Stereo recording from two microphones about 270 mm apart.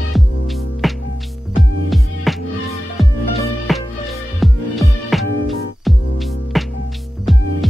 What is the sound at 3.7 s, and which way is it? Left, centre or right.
Music, centre.